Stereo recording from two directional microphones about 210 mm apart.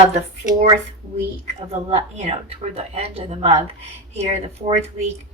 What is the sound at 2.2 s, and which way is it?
Speech, 30° right (ahead or behind).